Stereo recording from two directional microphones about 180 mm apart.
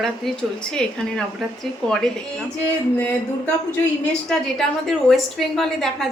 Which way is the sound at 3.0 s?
10° left (ahead or behind).